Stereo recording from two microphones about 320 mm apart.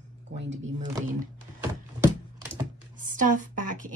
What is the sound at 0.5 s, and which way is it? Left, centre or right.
Speech, right.